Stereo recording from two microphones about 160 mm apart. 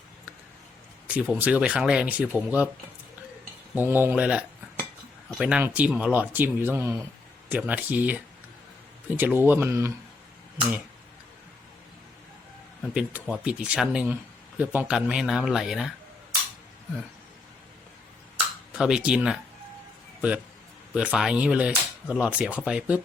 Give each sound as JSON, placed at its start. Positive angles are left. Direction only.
{"t": 1.0, "sound": "speech", "side_deg": -5}
{"t": 3.8, "sound": "speech", "side_deg": -15}
{"t": 12.8, "sound": "speech", "side_deg": -5}
{"t": 18.7, "sound": "speech", "side_deg": -5}
{"t": 20.9, "sound": "speech", "side_deg": -5}